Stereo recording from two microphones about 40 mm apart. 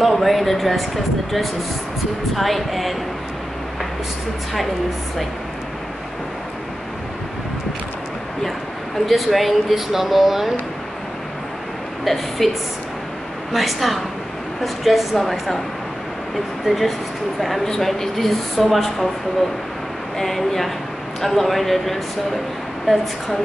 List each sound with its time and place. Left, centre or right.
0.0 s speech: centre
9.0 s speech: centre
12.0 s a woman's voice: centre
13.5 s speech: centre
16.6 s speech: centre
17.6 s speech: centre
20.2 s speech: centre